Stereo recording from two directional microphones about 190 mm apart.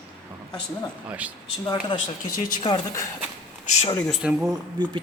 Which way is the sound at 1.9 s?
25° left (ahead or behind).